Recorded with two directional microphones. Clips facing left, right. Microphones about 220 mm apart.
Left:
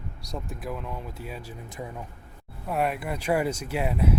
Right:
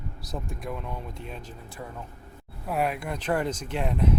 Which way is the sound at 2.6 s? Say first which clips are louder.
Left 1 dB; centre (ahead or behind).